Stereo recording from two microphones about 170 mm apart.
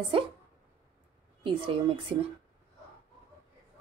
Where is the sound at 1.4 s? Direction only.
30° right (ahead or behind).